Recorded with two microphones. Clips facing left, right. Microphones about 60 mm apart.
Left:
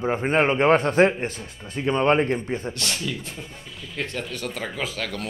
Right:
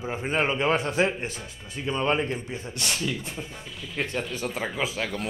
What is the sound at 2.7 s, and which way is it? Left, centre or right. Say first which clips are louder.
Speech: even; centre.